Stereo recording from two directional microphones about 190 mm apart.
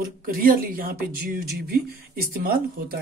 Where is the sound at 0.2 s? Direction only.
50° right (ahead or behind).